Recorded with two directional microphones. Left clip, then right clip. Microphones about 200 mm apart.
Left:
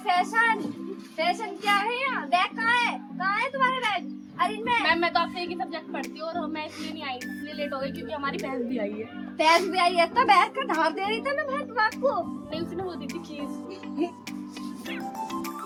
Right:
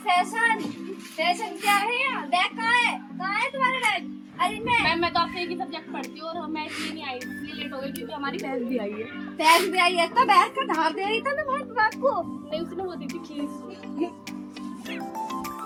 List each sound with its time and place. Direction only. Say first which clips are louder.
0.0 s a sound: right 1 dB; 10° right (ahead or behind)
7.6 s a woman's voice: left 4 dB; 5° left (ahead or behind)
9.4 s a child's voice: right 2 dB; 5° right (ahead or behind)
14.0 s music: even; 35° left (ahead or behind)
14.8 s music: right 2 dB; centre (ahead or behind)